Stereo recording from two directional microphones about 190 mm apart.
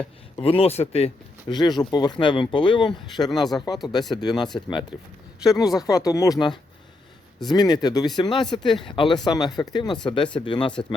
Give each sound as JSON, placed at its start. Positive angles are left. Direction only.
{"t": 0.3, "sound": "speech", "side_deg": 30}
{"t": 4.9, "sound": "speech", "side_deg": -5}
{"t": 5.4, "sound": "speech", "side_deg": 20}